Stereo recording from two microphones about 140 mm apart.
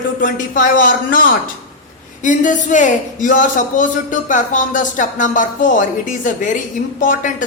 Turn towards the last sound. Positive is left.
turn(degrees=70)  # may be behind; listen again after turning